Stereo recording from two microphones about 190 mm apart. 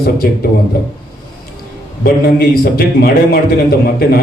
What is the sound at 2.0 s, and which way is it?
A man's voice, 50° left (ahead or behind).